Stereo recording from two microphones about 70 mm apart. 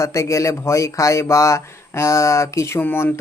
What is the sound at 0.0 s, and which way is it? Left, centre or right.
Speech, left.